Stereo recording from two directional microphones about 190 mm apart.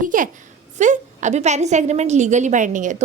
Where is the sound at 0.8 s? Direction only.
40° right (ahead or behind).